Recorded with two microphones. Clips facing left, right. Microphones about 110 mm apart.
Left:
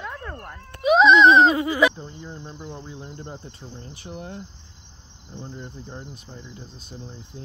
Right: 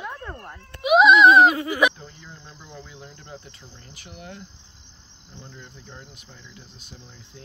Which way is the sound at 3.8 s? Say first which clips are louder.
Left 6 dB; 30° left (ahead or behind).